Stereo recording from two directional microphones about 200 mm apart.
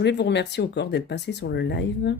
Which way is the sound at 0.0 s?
60° left (ahead or behind).